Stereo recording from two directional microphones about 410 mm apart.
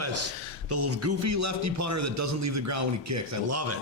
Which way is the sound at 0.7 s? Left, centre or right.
Right.